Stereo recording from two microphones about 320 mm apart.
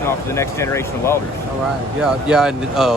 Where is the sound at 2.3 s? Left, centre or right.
Centre.